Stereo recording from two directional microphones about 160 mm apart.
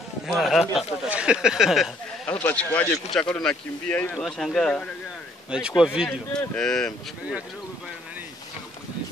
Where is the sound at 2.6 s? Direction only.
20° left (ahead or behind).